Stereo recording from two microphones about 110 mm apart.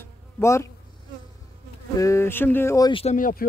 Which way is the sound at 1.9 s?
25° left (ahead or behind).